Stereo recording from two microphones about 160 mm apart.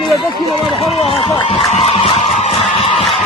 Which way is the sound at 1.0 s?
35° left (ahead or behind).